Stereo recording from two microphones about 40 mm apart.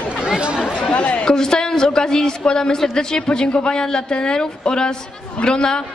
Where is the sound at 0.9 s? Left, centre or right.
Left.